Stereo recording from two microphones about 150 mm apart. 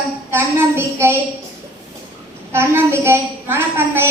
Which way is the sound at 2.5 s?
15° right (ahead or behind).